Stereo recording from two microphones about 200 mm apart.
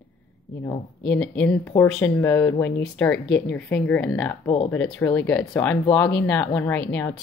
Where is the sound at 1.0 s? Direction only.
5° left (ahead or behind).